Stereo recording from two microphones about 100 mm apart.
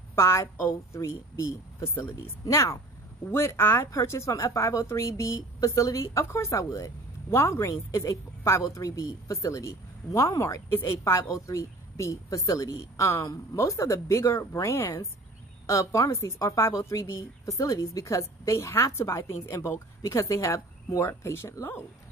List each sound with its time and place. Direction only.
0.1 s a woman's voice: 25° left (ahead or behind)